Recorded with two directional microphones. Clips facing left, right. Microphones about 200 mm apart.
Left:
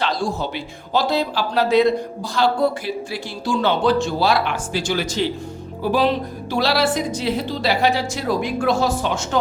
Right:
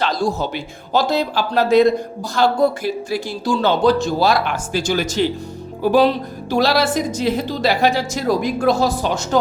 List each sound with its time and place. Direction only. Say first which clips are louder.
0.0 s speech: right 3 dB; 45° right (ahead or behind)
6.5 s speech: right 3 dB; 45° right (ahead or behind)